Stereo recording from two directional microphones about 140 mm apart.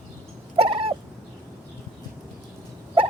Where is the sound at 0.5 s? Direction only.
45° right (ahead or behind).